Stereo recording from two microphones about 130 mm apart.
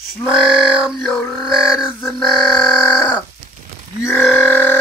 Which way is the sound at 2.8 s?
15° left (ahead or behind).